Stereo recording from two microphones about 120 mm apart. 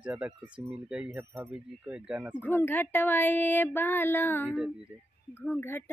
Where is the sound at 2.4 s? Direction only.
15° left (ahead or behind).